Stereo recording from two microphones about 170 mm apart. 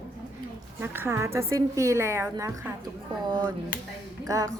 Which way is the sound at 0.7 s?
15° right (ahead or behind).